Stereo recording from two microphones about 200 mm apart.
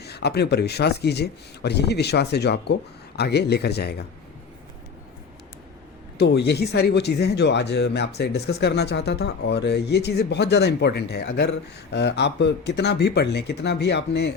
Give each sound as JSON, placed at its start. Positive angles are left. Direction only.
{"t": 0.0, "sound": "speech", "side_deg": 55}
{"t": 6.1, "sound": "speech", "side_deg": 55}